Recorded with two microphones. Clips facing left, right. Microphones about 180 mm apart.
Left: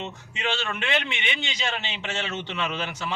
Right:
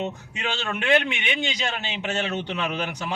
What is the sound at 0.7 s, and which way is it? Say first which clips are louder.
Speech: right 6 dB; 15° right (ahead or behind).